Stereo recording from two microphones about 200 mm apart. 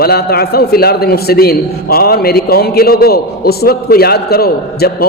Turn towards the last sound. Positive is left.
turn(degrees=50)  # may be behind; listen again after turning